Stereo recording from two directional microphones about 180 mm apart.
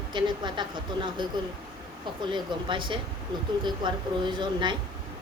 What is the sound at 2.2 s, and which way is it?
Speech, 25° right (ahead or behind).